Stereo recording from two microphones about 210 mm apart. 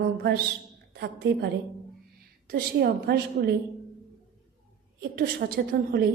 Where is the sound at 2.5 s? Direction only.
50° right (ahead or behind).